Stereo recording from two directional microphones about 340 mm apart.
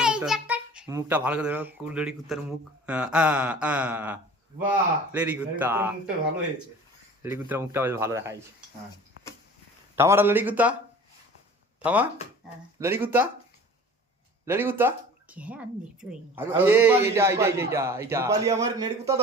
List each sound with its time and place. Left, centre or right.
0.0 s a child's voice: centre
7.2 s a woman's voice: centre
9.9 s speech: centre
11.8 s a woman's voice: centre
14.4 s a woman's voice: centre